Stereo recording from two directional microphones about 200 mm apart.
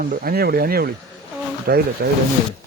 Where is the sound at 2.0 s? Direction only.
50° right (ahead or behind).